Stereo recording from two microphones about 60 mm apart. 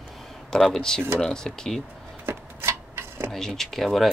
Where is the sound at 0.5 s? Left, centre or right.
Centre.